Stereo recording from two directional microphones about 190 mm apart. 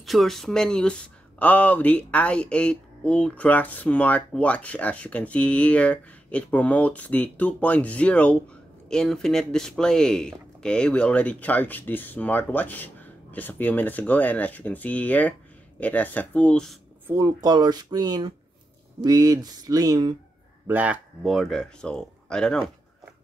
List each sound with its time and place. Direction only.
0.0 s speech: centre (ahead or behind)
17.1 s speech: 15° right (ahead or behind)
20.6 s speech: 10° right (ahead or behind)